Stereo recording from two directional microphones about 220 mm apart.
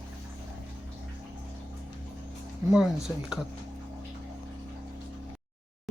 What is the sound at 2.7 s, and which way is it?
Speech, centre (ahead or behind).